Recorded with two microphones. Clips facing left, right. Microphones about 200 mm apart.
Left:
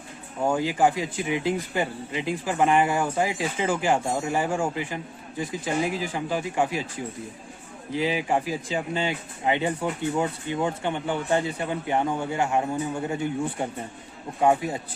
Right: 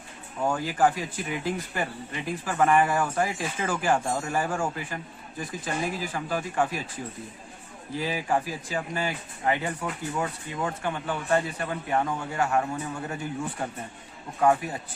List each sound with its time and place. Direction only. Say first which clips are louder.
0.4 s speech: left 2 dB; 20° left (ahead or behind)
7.9 s speech: left 3 dB; 20° left (ahead or behind)
14.4 s speech: left 1 dB; 20° left (ahead or behind)